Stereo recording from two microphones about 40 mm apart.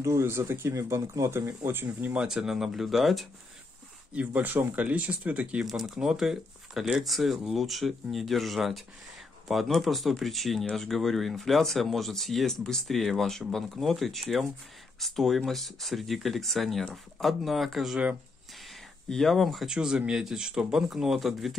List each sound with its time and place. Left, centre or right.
0.1 s speech: right
1.9 s speech: right
2.2 s speech: centre
4.1 s speech: right
5.7 s speech: centre
19.0 s speech: centre
19.6 s speech: centre